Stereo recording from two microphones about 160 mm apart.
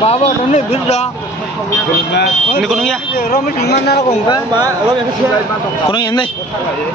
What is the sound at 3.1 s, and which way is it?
Speech, 75° left (ahead or behind).